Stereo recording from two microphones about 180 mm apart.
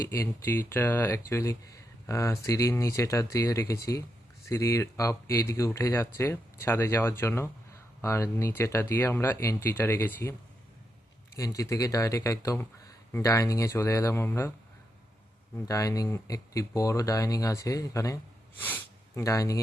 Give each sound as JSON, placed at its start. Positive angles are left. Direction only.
{"t": 0.1, "sound": "speech", "side_deg": 15}
{"t": 11.3, "sound": "speech", "side_deg": 20}
{"t": 15.6, "sound": "speech", "side_deg": 20}